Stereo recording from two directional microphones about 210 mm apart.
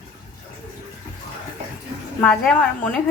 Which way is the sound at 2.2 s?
5° left (ahead or behind).